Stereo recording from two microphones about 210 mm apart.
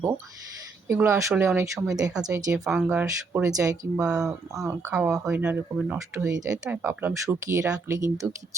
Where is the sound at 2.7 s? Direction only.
5° right (ahead or behind).